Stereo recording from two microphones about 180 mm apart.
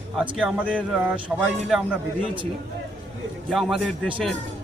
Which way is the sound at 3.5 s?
5° right (ahead or behind).